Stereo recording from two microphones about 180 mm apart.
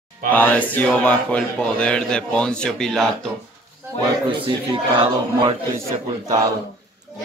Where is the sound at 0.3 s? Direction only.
10° left (ahead or behind).